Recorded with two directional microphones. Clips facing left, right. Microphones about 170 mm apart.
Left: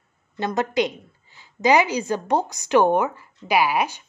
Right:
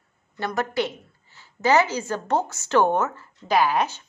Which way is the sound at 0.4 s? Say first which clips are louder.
Left 3 dB; 20° left (ahead or behind).